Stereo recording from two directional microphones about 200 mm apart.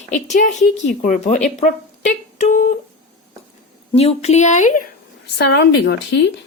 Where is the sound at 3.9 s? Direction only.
30° left (ahead or behind).